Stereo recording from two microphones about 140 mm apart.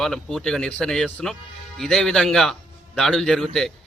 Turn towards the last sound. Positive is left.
turn(degrees=5)  # may be behind; listen again after turning